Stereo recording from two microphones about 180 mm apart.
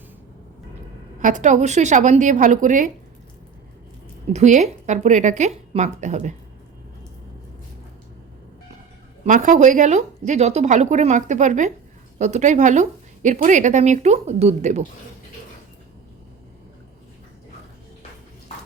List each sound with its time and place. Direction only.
1.2 s a woman's voice: 45° right (ahead or behind)
4.3 s a woman's voice: 40° right (ahead or behind)
9.2 s a woman's voice: 45° right (ahead or behind)